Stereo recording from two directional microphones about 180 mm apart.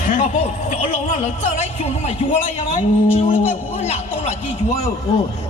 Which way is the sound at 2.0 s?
40° left (ahead or behind).